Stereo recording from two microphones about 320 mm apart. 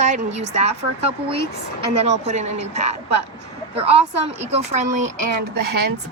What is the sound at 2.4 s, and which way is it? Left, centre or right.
Speech, right.